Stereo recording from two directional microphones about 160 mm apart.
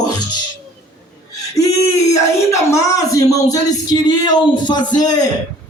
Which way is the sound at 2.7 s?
20° left (ahead or behind).